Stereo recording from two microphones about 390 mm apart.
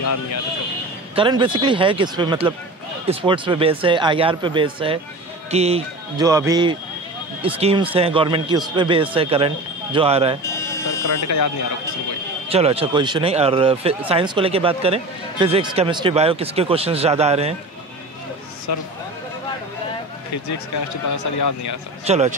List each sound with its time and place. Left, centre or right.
0.0 s speech: left
1.1 s speech: centre
10.4 s a sound: centre
11.1 s a man's voice: left
12.4 s speech: centre
18.7 s a man's voice: left
21.1 s a man's voice: left
22.0 s speech: centre